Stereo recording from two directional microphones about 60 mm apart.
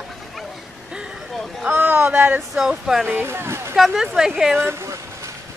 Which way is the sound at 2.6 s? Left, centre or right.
Centre.